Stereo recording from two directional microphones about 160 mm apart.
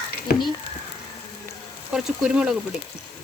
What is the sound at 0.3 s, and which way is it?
Speech, 75° left (ahead or behind).